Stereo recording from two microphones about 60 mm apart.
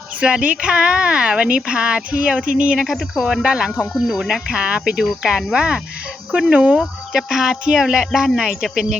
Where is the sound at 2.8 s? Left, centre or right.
Centre.